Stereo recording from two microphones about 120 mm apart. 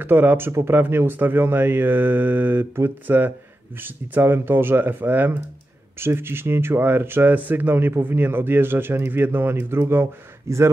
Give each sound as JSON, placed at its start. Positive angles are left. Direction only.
{"t": 0.0, "sound": "speech", "side_deg": -15}